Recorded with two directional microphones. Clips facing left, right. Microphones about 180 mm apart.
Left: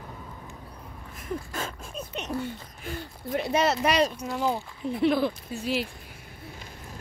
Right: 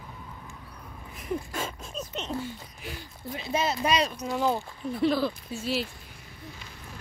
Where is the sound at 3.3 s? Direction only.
70° left (ahead or behind).